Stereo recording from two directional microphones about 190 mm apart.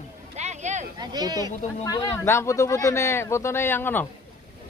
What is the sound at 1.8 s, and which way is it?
Speech, 20° left (ahead or behind).